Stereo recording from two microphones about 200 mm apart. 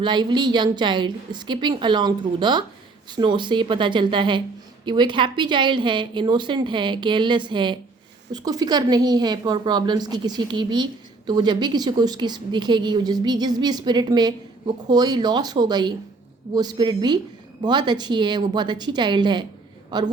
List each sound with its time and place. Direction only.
0.0 s a woman's voice: 20° right (ahead or behind)